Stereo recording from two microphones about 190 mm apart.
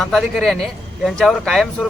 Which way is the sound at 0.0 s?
Centre (ahead or behind).